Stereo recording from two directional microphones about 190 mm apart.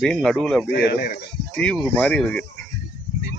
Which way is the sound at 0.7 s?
60° left (ahead or behind).